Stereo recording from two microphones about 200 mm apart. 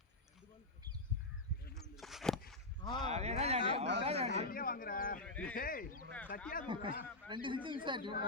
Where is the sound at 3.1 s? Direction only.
35° right (ahead or behind).